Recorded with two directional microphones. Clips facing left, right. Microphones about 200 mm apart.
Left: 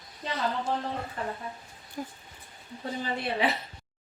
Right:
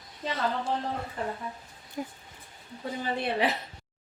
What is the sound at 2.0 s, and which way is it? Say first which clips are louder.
Throat clearing: right 2 dB; 15° right (ahead or behind).